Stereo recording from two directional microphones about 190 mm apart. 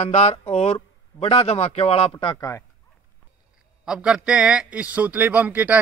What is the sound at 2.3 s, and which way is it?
Speech, 15° left (ahead or behind).